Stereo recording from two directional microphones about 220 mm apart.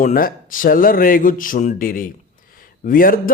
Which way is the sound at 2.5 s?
40° left (ahead or behind).